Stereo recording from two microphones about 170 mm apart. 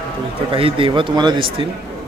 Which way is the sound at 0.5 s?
30° right (ahead or behind).